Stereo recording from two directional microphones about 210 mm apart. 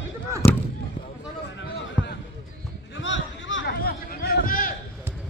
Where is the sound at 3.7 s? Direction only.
45° left (ahead or behind).